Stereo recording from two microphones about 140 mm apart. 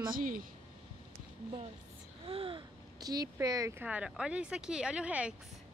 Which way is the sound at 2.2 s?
40° right (ahead or behind).